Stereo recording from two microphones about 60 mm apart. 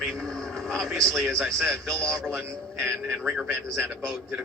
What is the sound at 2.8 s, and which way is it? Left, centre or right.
Speech, centre.